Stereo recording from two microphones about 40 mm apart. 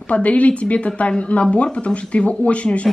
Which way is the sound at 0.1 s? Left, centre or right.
Left.